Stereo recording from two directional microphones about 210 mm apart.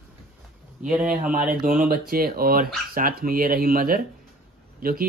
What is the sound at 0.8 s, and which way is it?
Speech, 5° right (ahead or behind).